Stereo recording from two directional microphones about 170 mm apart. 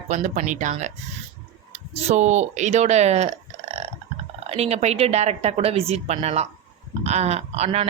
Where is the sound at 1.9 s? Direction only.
40° right (ahead or behind).